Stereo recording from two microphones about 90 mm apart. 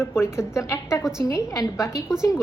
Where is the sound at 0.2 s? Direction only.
30° left (ahead or behind).